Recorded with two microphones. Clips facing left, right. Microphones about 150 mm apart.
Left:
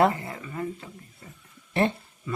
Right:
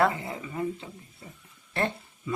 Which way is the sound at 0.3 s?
15° right (ahead or behind).